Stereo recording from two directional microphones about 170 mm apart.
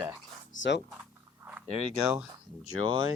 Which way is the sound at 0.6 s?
90° left.